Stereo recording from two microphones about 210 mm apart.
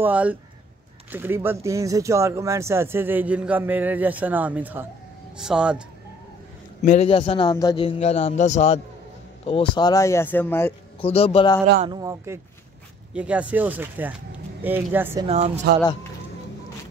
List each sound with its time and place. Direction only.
0.0 s speech: 5° right (ahead or behind)
6.8 s a man's voice: 35° left (ahead or behind); by 10.7 s 10° left (ahead or behind)
11.0 s a man's voice: 30° left (ahead or behind)
11.8 s speech: 20° right (ahead or behind)
15.2 s speech: 30° right (ahead or behind)